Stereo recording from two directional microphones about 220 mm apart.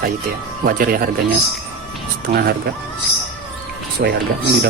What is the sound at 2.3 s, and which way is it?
Speech, 45° right (ahead or behind).